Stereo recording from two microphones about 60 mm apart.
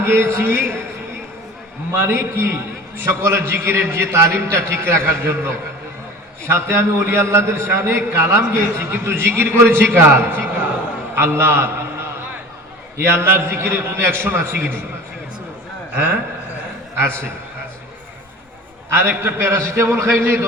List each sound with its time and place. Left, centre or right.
0.0 s a man's voice: right
1.9 s a man's voice: right
13.1 s a man's voice: right
16.0 s a man's voice: right
18.9 s a man's voice: right